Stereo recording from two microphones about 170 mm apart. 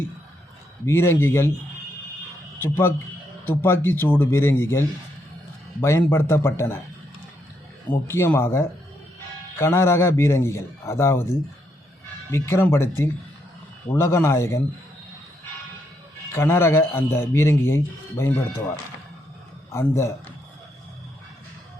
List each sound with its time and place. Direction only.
0.9 s a man's voice: 15° left (ahead or behind)
2.6 s a man's voice: 15° left (ahead or behind)
8.0 s a man's voice: 15° left (ahead or behind)
12.3 s a man's voice: 15° left (ahead or behind)
13.9 s a man's voice: 15° left (ahead or behind)
16.3 s a man's voice: 15° left (ahead or behind)
19.7 s a man's voice: 15° left (ahead or behind)